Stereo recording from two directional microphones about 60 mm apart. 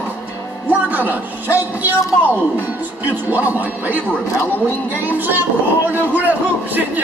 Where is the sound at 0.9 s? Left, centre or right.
Right.